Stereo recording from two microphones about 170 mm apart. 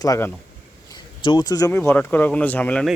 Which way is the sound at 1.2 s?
25° left (ahead or behind).